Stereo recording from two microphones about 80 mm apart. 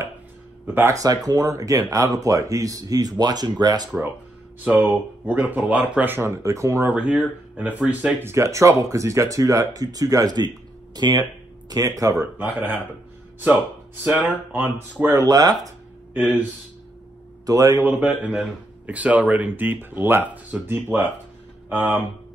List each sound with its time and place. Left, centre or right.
0.7 s speech: right
0.9 s speech: right
4.6 s speech: right
6.1 s speech: right
6.9 s speech: centre
8.2 s speech: right
11.7 s speech: right
12.2 s speech: right
14.2 s speech: right
15.2 s speech: right
17.5 s speech: right
17.7 s speech: right